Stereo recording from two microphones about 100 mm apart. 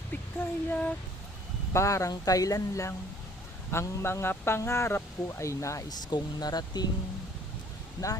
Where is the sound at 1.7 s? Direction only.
30° left (ahead or behind).